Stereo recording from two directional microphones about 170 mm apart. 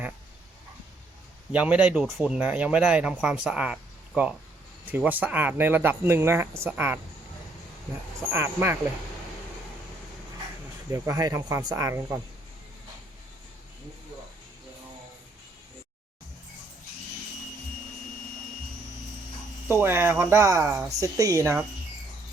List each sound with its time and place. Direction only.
1.5 s speech: 5° right (ahead or behind)
8.3 s speech: 15° right (ahead or behind)
10.9 s speech: 15° right (ahead or behind)
19.6 s speech: 15° right (ahead or behind)